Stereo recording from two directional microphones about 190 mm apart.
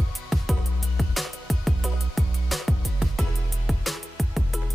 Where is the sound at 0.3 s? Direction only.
Centre (ahead or behind).